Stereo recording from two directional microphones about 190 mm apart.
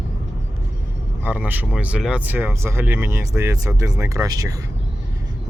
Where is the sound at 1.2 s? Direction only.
10° right (ahead or behind).